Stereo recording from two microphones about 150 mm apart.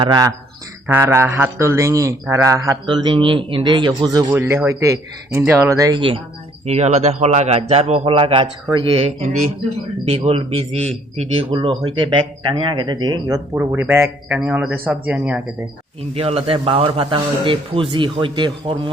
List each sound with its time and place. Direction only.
0.0 s speech: 25° right (ahead or behind)
0.9 s speech: 15° right (ahead or behind)
2.8 s a man's voice: 30° right (ahead or behind)
4.3 s speech: 15° right (ahead or behind)
6.0 s a man's voice: 35° right (ahead or behind)
13.6 s speech: 15° right (ahead or behind)
16.1 s a man's voice: 40° right (ahead or behind)